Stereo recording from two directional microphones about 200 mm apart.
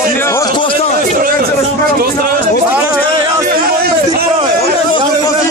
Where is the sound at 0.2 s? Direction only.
15° left (ahead or behind).